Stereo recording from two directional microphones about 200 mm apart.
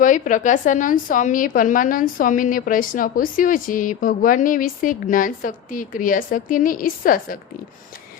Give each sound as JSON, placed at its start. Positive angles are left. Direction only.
{"t": 0.0, "sound": "a woman's voice", "side_deg": 40}